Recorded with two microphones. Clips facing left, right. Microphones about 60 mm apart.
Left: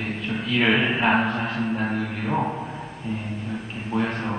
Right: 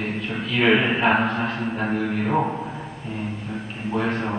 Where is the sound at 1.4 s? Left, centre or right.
Right.